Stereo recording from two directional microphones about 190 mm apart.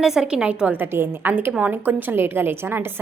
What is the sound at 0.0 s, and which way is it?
A woman's voice, 5° right (ahead or behind).